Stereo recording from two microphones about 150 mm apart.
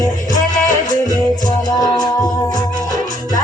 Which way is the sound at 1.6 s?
25° left (ahead or behind).